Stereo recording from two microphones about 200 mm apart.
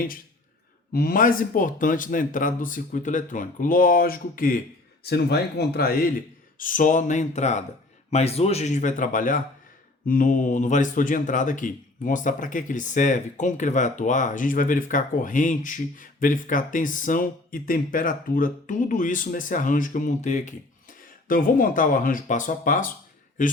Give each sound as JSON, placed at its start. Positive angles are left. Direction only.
{"t": 0.9, "sound": "speech", "side_deg": 45}